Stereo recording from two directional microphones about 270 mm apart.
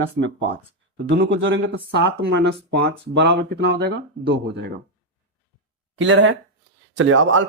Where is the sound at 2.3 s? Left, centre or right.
Right.